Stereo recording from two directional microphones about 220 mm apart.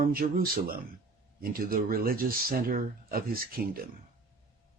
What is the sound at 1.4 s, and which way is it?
Speech, 40° right (ahead or behind).